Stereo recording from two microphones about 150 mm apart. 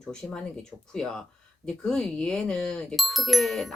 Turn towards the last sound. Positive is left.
turn(degrees=0)  # may be behind; listen again after turning